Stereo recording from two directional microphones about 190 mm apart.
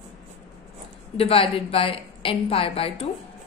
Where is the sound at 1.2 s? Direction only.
30° left (ahead or behind).